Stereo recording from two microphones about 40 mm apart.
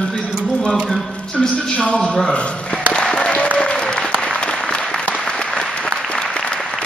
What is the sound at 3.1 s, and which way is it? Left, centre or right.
Applause, left.